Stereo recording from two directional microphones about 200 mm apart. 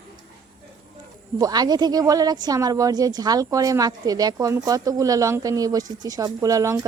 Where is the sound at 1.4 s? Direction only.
20° right (ahead or behind).